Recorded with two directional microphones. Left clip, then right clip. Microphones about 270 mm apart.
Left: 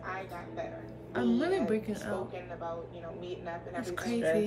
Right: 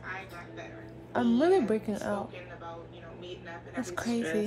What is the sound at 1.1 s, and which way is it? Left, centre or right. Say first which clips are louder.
A woman's voice: right 5 dB; centre.